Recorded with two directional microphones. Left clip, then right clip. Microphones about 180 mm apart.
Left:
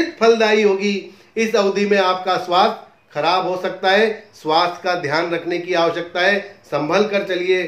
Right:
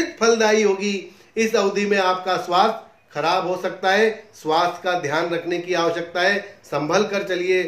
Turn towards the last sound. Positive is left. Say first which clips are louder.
# left 3 dB
turn(degrees=15)  # may be behind; listen again after turning